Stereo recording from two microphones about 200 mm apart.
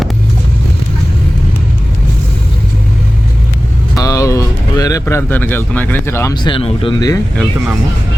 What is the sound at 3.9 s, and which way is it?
Speech, 15° left (ahead or behind).